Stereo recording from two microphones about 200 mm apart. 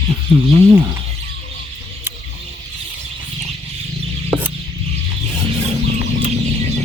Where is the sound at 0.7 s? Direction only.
15° right (ahead or behind).